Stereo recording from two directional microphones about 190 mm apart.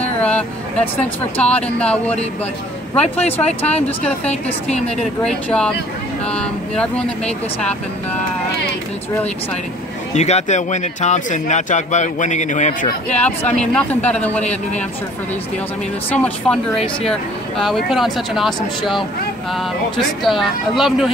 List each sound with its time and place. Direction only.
0.0 s vehicle: 5° left (ahead or behind)
1.3 s speech: 5° left (ahead or behind)
10.1 s speech: 35° left (ahead or behind)
13.1 s speech: 5° left (ahead or behind)
16.1 s speech: 5° left (ahead or behind)
20.2 s speech: centre (ahead or behind)